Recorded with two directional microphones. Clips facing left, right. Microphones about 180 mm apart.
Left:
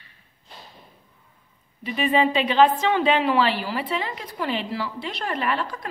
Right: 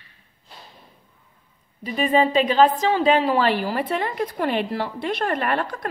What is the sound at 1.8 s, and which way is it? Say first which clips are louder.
A woman's voice: right 2 dB; 40° right (ahead or behind).